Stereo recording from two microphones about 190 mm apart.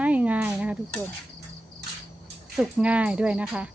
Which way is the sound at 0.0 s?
5° right (ahead or behind).